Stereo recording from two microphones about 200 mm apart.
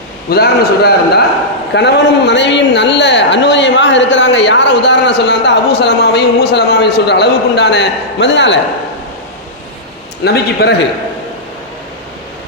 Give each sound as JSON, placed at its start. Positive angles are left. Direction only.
{"t": 0.3, "sound": "a man's voice", "side_deg": 50}
{"t": 10.2, "sound": "a man's voice", "side_deg": 55}